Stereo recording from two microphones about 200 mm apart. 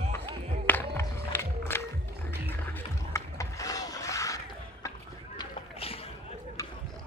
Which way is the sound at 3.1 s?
15° left (ahead or behind).